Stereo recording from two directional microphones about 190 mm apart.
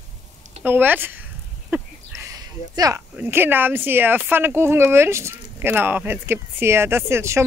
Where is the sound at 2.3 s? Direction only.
20° right (ahead or behind).